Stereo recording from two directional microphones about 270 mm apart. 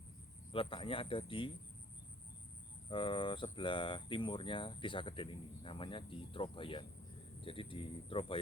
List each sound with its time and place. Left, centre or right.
0.5 s speech: centre
2.9 s speech: centre